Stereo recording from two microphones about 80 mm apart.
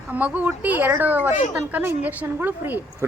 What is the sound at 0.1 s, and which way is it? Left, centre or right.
A woman's voice, centre.